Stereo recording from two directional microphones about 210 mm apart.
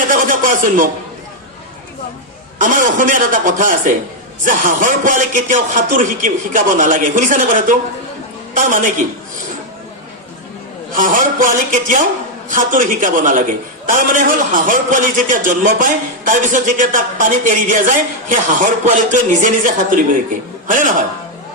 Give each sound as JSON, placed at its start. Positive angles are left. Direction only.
{"t": 0.1, "sound": "a man's voice", "side_deg": -40}
{"t": 2.6, "sound": "a man's voice", "side_deg": -40}
{"t": 10.9, "sound": "a man's voice", "side_deg": -40}